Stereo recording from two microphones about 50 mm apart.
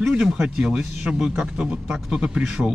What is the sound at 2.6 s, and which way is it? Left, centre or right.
Speech, centre.